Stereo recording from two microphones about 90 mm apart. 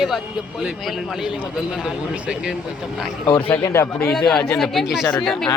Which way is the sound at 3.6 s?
30° left (ahead or behind).